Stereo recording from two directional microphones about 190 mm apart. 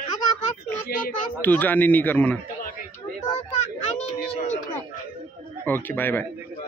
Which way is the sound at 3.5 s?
35° left (ahead or behind).